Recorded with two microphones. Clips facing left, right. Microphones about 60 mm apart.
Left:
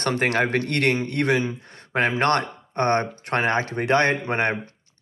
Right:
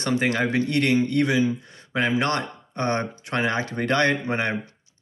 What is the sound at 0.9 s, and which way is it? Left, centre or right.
A man's voice, left.